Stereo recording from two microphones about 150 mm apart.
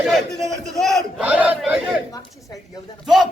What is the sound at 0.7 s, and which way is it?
Speech, centre (ahead or behind).